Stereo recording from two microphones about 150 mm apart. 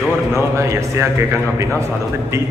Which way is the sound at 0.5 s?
20° right (ahead or behind).